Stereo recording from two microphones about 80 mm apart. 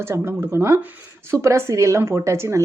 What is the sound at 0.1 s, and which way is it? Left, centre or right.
Speech, right.